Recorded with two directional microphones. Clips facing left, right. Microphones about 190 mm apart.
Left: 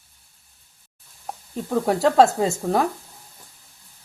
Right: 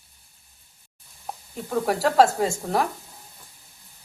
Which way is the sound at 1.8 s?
25° left (ahead or behind).